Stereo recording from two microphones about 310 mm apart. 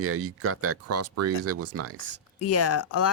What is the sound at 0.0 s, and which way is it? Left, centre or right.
Speech, right.